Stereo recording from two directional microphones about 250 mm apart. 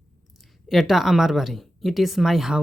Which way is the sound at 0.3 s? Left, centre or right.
Centre.